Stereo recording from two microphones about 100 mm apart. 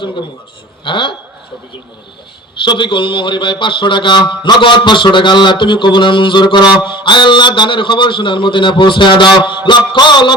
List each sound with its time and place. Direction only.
0.9 s a man's voice: 55° left (ahead or behind)
2.6 s a man's voice: 55° left (ahead or behind)